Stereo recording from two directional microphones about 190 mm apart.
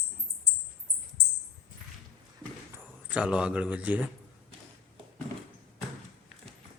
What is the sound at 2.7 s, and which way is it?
Speech, 5° right (ahead or behind).